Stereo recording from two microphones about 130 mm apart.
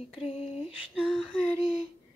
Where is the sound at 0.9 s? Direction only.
Centre (ahead or behind).